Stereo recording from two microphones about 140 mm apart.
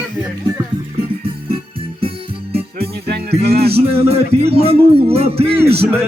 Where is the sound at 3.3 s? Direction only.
45° right (ahead or behind).